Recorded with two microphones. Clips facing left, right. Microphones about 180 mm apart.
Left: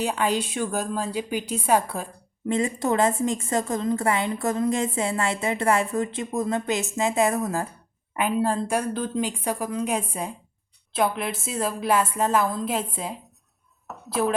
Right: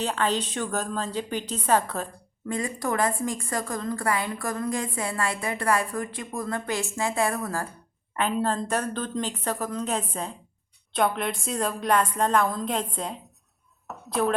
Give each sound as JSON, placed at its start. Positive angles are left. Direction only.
{"t": 0.0, "sound": "speech", "side_deg": 10}
{"t": 2.5, "sound": "a woman's voice", "side_deg": 25}
{"t": 8.1, "sound": "speech", "side_deg": 10}
{"t": 13.8, "sound": "a sound", "side_deg": 0}